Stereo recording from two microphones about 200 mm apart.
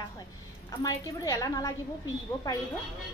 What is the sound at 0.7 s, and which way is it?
A woman's voice, 15° left (ahead or behind).